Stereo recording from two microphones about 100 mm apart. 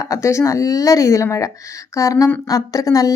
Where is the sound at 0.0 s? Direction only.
30° left (ahead or behind).